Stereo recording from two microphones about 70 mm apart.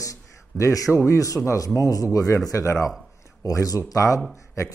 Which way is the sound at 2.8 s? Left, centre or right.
Centre.